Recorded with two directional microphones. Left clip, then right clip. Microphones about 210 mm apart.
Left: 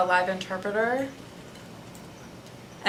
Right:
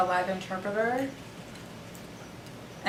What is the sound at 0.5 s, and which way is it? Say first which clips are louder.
Speech: left 3 dB; 20° left (ahead or behind).